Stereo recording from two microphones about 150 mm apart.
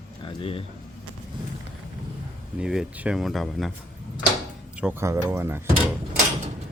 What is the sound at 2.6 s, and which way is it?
Speech, 5° right (ahead or behind).